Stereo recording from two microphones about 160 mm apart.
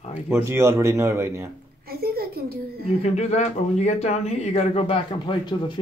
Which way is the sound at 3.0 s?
45° left (ahead or behind).